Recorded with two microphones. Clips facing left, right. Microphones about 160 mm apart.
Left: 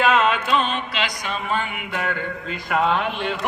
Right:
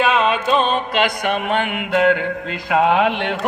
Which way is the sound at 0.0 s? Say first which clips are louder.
Right 2 dB; 20° right (ahead or behind).